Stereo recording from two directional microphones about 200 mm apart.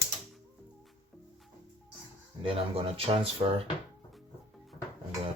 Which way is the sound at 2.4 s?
30° right (ahead or behind).